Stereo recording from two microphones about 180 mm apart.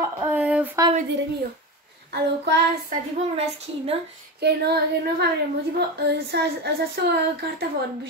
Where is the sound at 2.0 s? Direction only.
70° right (ahead or behind).